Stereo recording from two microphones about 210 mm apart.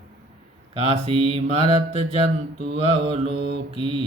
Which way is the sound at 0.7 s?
25° right (ahead or behind).